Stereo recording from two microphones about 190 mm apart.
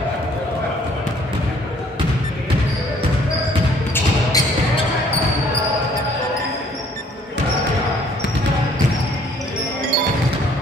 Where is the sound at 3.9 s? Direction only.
20° left (ahead or behind).